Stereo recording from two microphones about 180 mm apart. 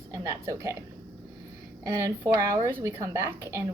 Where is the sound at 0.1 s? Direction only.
20° right (ahead or behind).